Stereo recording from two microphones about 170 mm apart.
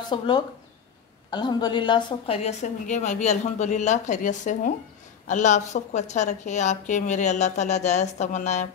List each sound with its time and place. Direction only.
0.1 s speech: 30° left (ahead or behind)
1.3 s a woman's voice: 25° left (ahead or behind); by 8.6 s 45° left (ahead or behind)